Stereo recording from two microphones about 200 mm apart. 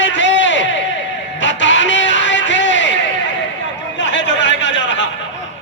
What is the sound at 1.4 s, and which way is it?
Music, 65° left (ahead or behind).